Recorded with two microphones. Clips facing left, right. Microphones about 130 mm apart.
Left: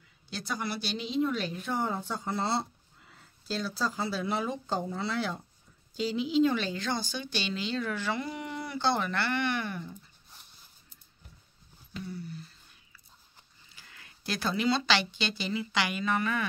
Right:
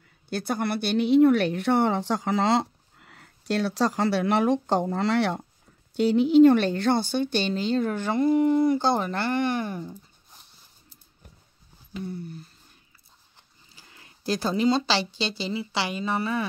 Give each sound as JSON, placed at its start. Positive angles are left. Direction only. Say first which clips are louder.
{"t": 0.3, "sound": "speech", "louder": "right 8 dB", "side_deg": -55}
{"t": 5.9, "sound": "speech", "louder": "right 10 dB", "side_deg": -60}
{"t": 12.0, "sound": "speech", "louder": "right 5 dB", "side_deg": -50}
{"t": 13.7, "sound": "speech", "louder": "right 2 dB", "side_deg": -25}